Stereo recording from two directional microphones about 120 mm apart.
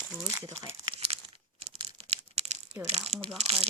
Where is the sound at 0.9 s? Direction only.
60° right (ahead or behind).